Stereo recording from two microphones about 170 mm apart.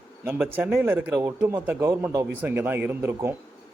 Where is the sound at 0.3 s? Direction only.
10° right (ahead or behind).